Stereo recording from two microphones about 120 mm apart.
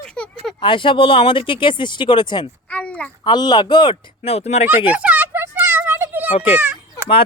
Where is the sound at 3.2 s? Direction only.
35° left (ahead or behind).